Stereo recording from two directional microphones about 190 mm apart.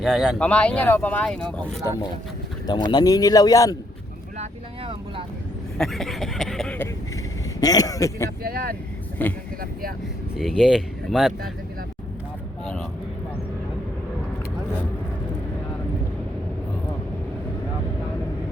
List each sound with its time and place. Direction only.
0.0 s speech: centre (ahead or behind)
2.6 s speech: 25° left (ahead or behind)
5.7 s speech: centre (ahead or behind)
7.6 s speech: 20° left (ahead or behind)
8.4 s speech: 55° right (ahead or behind)
9.2 s speech: 10° left (ahead or behind)
10.3 s speech: 5° right (ahead or behind)